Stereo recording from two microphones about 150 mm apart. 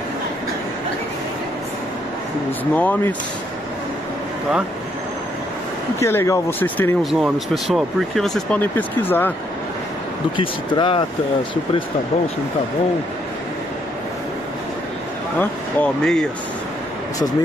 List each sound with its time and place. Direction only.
2.7 s speech: 10° left (ahead or behind)
5.9 s speech: 20° left (ahead or behind)
7.0 s speech: centre (ahead or behind)
10.3 s speech: 35° left (ahead or behind)
15.3 s speech: 10° left (ahead or behind)